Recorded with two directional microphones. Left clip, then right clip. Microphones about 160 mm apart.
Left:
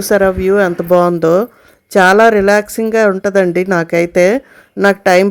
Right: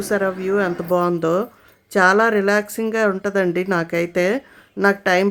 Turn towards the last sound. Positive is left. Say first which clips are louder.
# left 7 dB
turn(degrees=35)  # may be behind; listen again after turning